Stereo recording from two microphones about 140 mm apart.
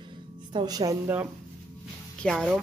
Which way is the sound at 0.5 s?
30° right (ahead or behind).